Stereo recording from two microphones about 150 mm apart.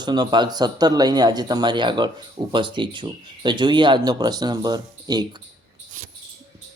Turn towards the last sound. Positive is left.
turn(degrees=-25)  # may be behind; listen again after turning